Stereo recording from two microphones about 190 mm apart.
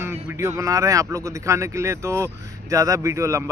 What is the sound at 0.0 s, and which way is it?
Speech, 15° right (ahead or behind).